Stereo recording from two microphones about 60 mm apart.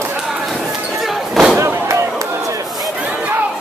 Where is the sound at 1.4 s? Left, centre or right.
Centre.